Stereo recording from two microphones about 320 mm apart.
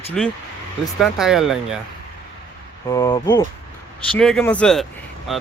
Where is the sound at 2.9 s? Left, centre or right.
Centre.